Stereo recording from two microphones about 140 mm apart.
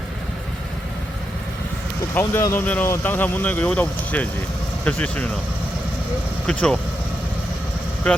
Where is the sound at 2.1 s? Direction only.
15° left (ahead or behind).